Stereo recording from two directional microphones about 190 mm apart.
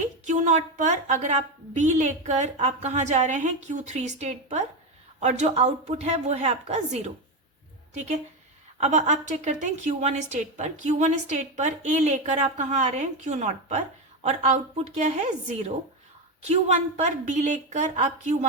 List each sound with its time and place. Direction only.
0.3 s a woman's voice: 40° right (ahead or behind)